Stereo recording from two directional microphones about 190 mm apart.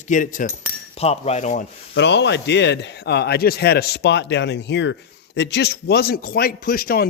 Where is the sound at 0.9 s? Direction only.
35° left (ahead or behind).